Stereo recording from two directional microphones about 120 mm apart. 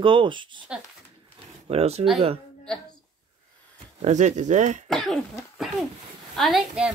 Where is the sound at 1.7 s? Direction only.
60° right (ahead or behind).